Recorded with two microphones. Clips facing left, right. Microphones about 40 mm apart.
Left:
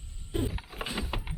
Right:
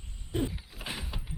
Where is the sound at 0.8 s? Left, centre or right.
Centre.